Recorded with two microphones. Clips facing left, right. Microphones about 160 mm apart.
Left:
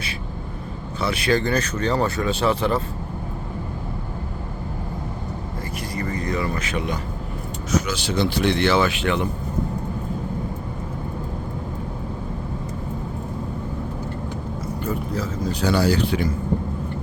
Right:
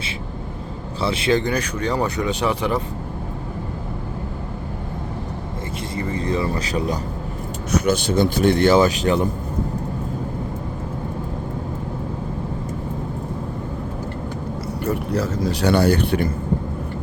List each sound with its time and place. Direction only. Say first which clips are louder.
1.0 s speech: right 2 dB; 25° right (ahead or behind)
5.9 s speech: right 3 dB; 25° right (ahead or behind)
7.7 s speech: right 4 dB; 50° right (ahead or behind)
14.8 s speech: right 5 dB; 70° right (ahead or behind); by 16.3 s 55° right (ahead or behind)